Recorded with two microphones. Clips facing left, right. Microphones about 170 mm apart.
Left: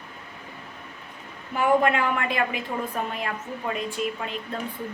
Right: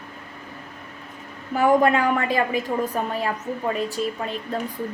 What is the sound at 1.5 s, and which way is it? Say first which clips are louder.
A woman's voice: right 3 dB; 40° right (ahead or behind).